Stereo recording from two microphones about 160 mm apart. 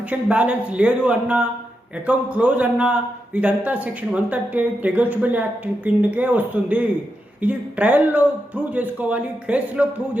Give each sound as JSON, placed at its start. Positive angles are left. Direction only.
{"t": 0.1, "sound": "a man's voice", "side_deg": -10}